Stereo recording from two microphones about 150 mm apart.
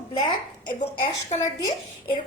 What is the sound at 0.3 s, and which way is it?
A woman's voice, 30° left (ahead or behind).